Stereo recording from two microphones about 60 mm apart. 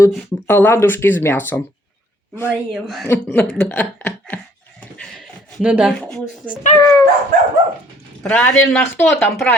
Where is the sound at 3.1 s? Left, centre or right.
Left.